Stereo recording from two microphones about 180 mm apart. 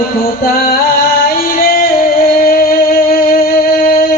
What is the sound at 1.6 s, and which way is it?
Singing, 55° left (ahead or behind).